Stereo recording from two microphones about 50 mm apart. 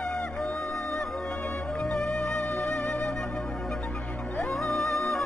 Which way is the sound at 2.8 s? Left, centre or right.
Left.